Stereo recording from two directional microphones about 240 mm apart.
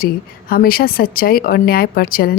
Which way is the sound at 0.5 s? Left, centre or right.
Left.